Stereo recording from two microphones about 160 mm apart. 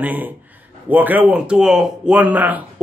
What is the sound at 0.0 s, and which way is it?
Speech, 10° right (ahead or behind).